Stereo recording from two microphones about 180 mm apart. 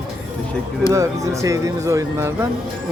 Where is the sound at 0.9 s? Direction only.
15° right (ahead or behind).